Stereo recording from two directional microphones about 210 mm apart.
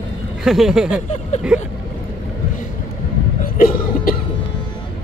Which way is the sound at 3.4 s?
40° left (ahead or behind).